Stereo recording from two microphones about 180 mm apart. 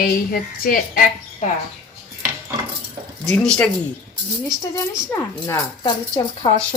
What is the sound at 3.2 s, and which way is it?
Speech, 5° left (ahead or behind).